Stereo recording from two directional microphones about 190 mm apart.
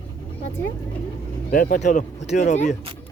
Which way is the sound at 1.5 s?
45° left (ahead or behind).